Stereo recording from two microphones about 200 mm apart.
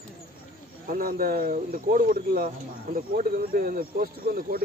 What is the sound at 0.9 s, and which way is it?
Speech, 45° right (ahead or behind).